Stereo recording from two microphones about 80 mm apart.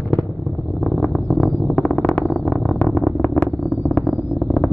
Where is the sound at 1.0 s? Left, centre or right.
Centre.